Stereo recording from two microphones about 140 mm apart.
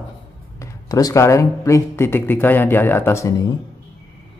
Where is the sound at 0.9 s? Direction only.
25° left (ahead or behind).